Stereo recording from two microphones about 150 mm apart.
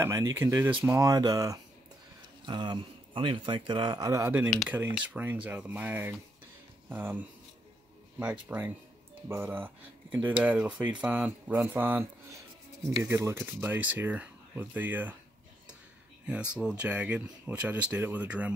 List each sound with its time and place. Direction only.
0.0 s speech: 20° right (ahead or behind)
16.3 s speech: 5° right (ahead or behind)